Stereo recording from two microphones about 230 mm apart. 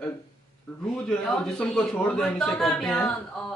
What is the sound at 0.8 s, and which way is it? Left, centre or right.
A man's voice, centre.